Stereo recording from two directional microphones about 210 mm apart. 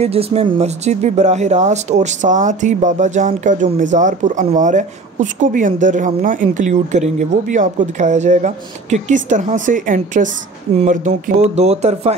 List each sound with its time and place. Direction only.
0.0 s speech: 30° right (ahead or behind)